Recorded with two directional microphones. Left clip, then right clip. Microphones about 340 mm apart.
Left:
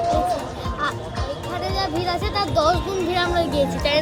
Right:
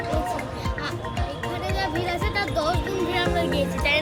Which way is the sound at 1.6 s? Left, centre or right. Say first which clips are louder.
Left 3 dB; centre.